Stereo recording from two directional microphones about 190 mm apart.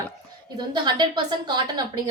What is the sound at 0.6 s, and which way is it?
A woman's voice, 25° right (ahead or behind).